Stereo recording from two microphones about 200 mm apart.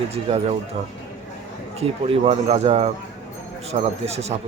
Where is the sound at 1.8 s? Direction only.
30° right (ahead or behind).